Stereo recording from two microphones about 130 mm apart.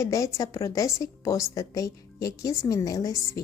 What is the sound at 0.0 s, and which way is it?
Speech, 25° left (ahead or behind).